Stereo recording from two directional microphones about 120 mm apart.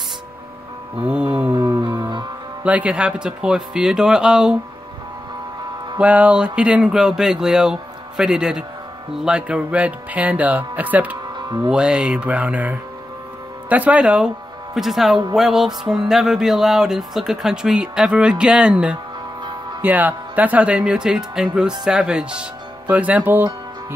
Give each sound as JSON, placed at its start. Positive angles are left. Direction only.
{"t": 1.0, "sound": "speech", "side_deg": -10}
{"t": 1.5, "sound": "music", "side_deg": -40}
{"t": 2.6, "sound": "speech", "side_deg": -10}
{"t": 5.9, "sound": "music", "side_deg": -10}
{"t": 9.2, "sound": "speech", "side_deg": -10}
{"t": 15.3, "sound": "music", "side_deg": -5}
{"t": 19.8, "sound": "speech", "side_deg": -15}